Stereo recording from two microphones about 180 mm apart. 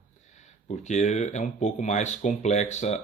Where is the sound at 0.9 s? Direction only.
40° left (ahead or behind).